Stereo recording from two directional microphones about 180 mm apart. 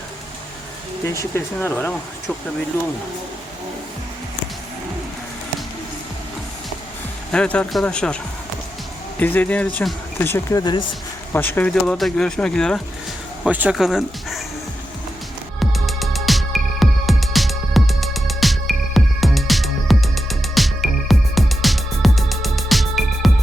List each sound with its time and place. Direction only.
1.0 s speech: 15° left (ahead or behind)
7.3 s speech: 5° left (ahead or behind)
10.6 s speech: 25° left (ahead or behind)
11.3 s speech: 10° left (ahead or behind)
13.4 s speech: 5° right (ahead or behind)
15.7 s music: centre (ahead or behind)